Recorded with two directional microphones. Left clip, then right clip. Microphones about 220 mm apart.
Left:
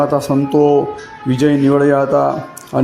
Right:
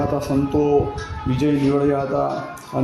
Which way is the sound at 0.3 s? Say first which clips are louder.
Left 5 dB; 20° left (ahead or behind).